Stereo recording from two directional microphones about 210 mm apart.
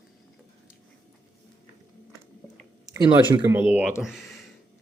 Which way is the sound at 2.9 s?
20° right (ahead or behind).